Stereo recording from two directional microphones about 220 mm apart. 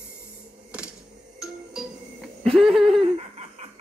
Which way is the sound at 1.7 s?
5° right (ahead or behind).